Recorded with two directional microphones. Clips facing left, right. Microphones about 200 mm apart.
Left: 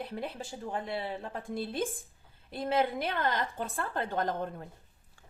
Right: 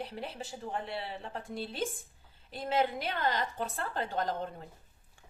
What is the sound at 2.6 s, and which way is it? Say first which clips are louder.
A woman's voice: left 2 dB; 50° left (ahead or behind).